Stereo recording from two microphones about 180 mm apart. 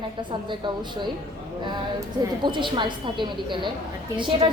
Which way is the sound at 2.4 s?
25° right (ahead or behind).